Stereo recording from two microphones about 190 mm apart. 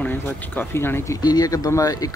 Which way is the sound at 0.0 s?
10° left (ahead or behind).